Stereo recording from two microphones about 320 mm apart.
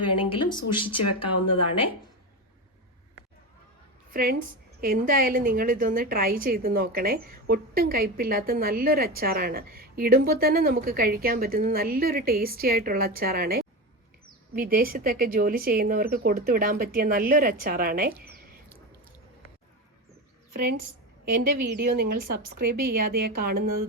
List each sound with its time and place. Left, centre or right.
0.2 s speech: centre
4.1 s a woman's voice: right
20.5 s a woman's voice: right